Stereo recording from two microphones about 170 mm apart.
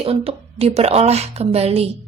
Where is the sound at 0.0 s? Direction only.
35° right (ahead or behind).